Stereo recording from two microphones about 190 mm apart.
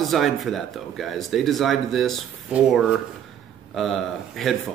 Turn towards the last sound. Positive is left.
turn(degrees=0)  # may be behind; listen again after turning